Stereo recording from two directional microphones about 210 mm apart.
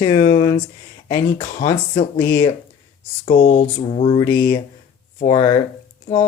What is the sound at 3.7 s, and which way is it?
Speech, 30° left (ahead or behind).